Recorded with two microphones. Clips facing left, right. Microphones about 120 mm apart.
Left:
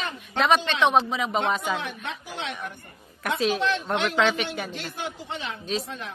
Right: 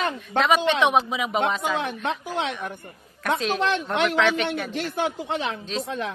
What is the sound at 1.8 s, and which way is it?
Speech, 50° right (ahead or behind).